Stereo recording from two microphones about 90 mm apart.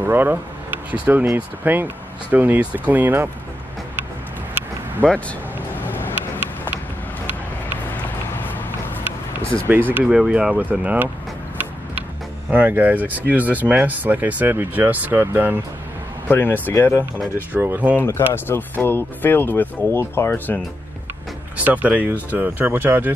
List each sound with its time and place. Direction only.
0.0 s speech: 20° right (ahead or behind)
5.0 s speech: 15° left (ahead or behind)
5.9 s vehicle: 25° left (ahead or behind)
8.4 s a sound: 20° left (ahead or behind)
10.0 s speech: 5° right (ahead or behind)
12.4 s speech: 20° right (ahead or behind)
16.3 s speech: 20° left (ahead or behind)
17.5 s speech: 20° right (ahead or behind)
18.3 s speech: 25° left (ahead or behind)
21.5 s speech: 20° right (ahead or behind)